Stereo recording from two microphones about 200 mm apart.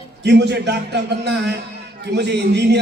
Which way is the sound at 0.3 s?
60° right (ahead or behind).